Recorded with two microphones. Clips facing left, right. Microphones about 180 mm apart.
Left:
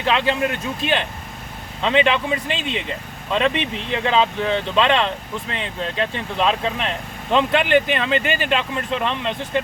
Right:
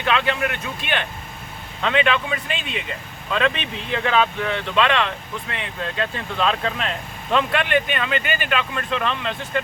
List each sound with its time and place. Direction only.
0.0 s speech: 30° left (ahead or behind)